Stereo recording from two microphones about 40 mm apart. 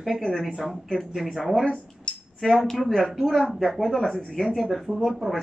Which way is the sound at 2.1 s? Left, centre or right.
Left.